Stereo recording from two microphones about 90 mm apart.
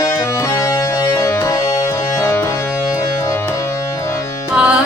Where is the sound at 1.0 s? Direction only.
35° left (ahead or behind).